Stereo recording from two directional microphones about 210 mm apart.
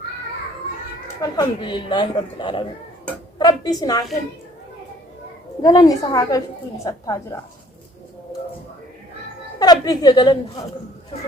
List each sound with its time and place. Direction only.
1.2 s speech: 20° left (ahead or behind)
5.6 s a woman's voice: 20° left (ahead or behind)
9.6 s speech: 20° left (ahead or behind)